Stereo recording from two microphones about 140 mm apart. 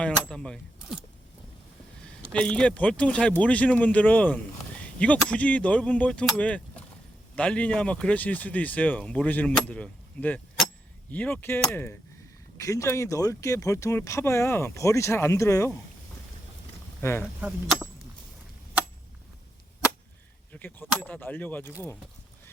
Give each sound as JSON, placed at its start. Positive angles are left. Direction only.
{"t": 0.0, "sound": "speech", "side_deg": 5}
{"t": 2.0, "sound": "speech", "side_deg": 5}
{"t": 17.0, "sound": "speech", "side_deg": 15}
{"t": 20.5, "sound": "speech", "side_deg": 15}